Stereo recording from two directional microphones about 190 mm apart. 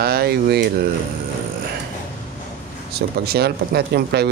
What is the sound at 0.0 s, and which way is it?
Speech, 55° right (ahead or behind).